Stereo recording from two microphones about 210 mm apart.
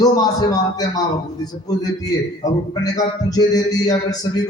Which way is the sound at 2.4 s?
20° left (ahead or behind).